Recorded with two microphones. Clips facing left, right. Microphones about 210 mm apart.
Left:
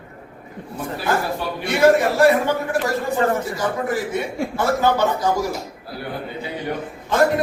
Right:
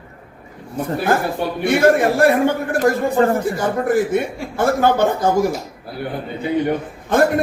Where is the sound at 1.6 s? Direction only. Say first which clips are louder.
Right 1 dB; 50° right (ahead or behind).